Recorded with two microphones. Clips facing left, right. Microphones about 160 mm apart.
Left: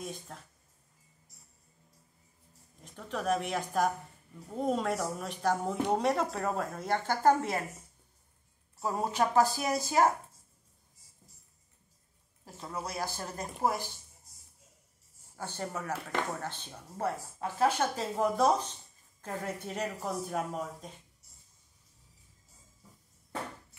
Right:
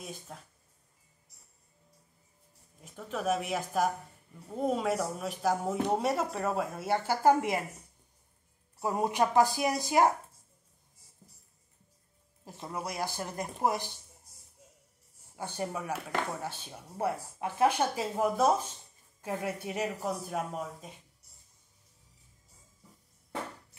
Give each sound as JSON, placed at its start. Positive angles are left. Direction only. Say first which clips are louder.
{"t": 0.0, "sound": "speech", "louder": "left 2 dB", "side_deg": -5}
{"t": 2.8, "sound": "speech", "louder": "right 1 dB", "side_deg": -5}
{"t": 8.7, "sound": "speech", "louder": "right 2 dB", "side_deg": -15}
{"t": 12.4, "sound": "speech", "louder": "right 1 dB", "side_deg": -20}
{"t": 15.3, "sound": "speech", "louder": "right 2 dB", "side_deg": -15}